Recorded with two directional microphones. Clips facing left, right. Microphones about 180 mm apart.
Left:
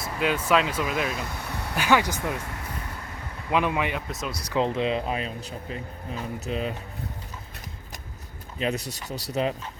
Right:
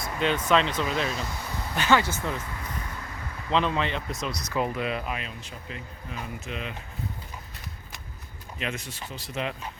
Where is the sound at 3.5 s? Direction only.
10° left (ahead or behind).